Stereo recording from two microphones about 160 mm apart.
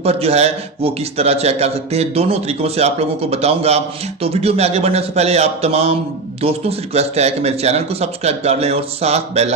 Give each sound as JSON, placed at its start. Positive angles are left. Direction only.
{"t": 0.0, "sound": "a man's voice", "side_deg": -40}